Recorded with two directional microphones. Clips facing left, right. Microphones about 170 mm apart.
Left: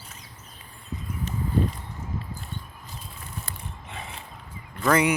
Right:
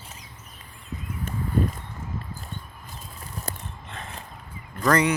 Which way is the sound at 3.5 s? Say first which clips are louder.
Right 6 dB; 40° right (ahead or behind).